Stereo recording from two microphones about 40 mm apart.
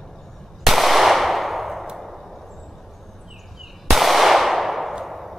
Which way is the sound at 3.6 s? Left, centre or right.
Centre.